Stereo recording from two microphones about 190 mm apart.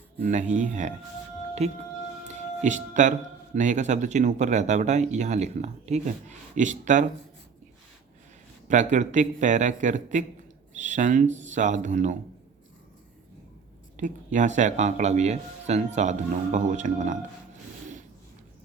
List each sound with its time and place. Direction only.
0.2 s speech: 40° right (ahead or behind)
8.6 s speech: 40° right (ahead or behind)
13.9 s speech: 40° right (ahead or behind)